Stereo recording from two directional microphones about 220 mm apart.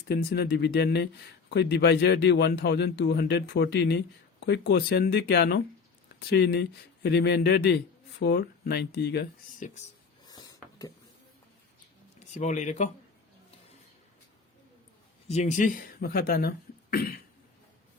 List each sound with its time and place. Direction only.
0.1 s speech: 45° left (ahead or behind)
10.2 s a sound: 15° left (ahead or behind)
12.3 s speech: 30° left (ahead or behind)
15.3 s speech: 30° left (ahead or behind)